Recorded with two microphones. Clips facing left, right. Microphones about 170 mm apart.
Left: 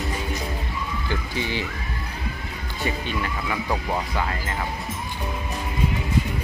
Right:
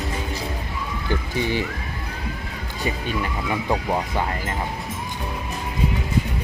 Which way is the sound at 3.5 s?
20° right (ahead or behind).